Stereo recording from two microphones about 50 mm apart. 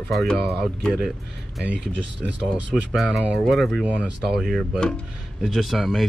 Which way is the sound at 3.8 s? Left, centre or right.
Right.